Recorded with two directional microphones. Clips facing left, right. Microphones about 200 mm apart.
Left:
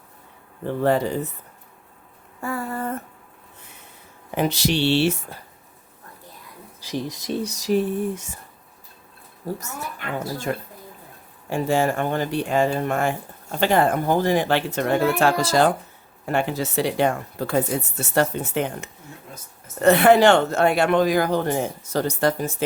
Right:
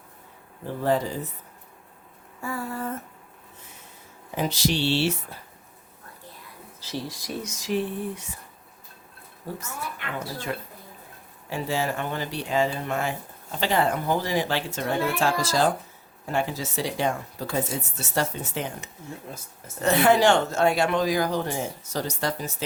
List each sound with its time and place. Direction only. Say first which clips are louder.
0.8 s speech: left 4 dB; 65° left (ahead or behind)
2.4 s speech: left 3 dB; 60° left (ahead or behind)
4.4 s speech: left 4 dB; 65° left (ahead or behind)
6.7 s speech: left 5 dB; 15° left (ahead or behind); by 8.3 s 45° left (ahead or behind)
9.5 s speech: left 4 dB; 40° left (ahead or behind)